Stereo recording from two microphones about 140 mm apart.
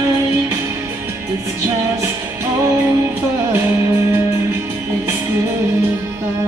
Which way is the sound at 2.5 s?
20° right (ahead or behind).